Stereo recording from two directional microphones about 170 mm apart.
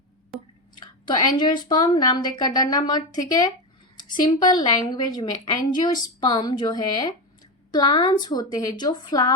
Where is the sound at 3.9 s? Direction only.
25° left (ahead or behind).